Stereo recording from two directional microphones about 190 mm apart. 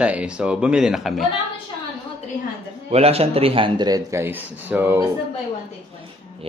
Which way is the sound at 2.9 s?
30° right (ahead or behind).